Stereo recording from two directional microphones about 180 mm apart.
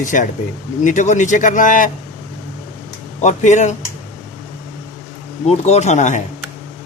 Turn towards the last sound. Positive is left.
turn(degrees=40)  # may be behind; listen again after turning